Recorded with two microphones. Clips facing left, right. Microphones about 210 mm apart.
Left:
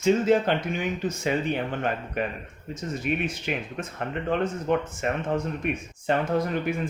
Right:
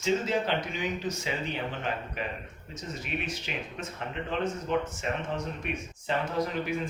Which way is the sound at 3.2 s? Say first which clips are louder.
Left 6 dB; 55° left (ahead or behind).